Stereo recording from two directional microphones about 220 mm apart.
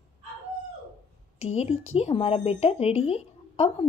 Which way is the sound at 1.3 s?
30° left (ahead or behind).